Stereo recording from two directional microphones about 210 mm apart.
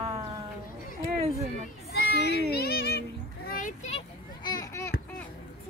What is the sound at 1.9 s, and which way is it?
Children playing, 50° left (ahead or behind).